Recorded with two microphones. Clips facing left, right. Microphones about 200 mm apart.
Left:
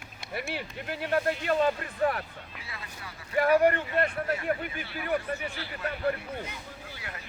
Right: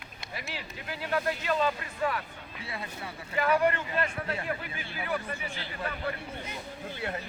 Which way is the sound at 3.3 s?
55° left (ahead or behind).